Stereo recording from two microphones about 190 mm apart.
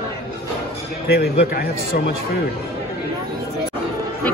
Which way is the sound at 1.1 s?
55° left (ahead or behind).